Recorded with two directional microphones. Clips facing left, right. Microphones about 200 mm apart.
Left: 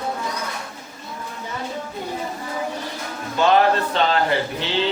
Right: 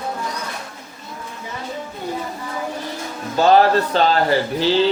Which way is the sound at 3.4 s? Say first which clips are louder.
Right 3 dB; 35° right (ahead or behind).